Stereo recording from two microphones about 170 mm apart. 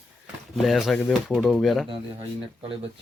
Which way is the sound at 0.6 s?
Centre (ahead or behind).